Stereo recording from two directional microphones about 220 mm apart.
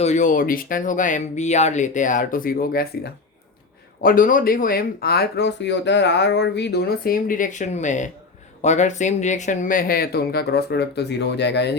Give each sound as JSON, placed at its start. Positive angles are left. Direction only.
{"t": 0.0, "sound": "speech", "side_deg": 35}